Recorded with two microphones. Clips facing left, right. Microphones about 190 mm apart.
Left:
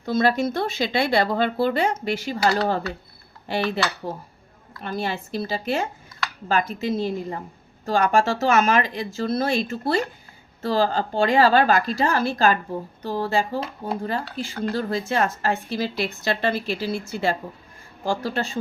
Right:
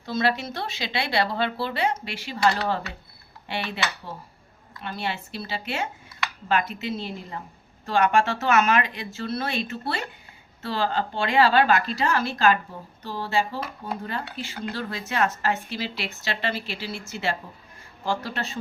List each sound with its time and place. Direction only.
0.0 s speech: 50° left (ahead or behind)
13.6 s speech: 30° left (ahead or behind); by 17.0 s 45° left (ahead or behind)
18.0 s speech: 40° left (ahead or behind)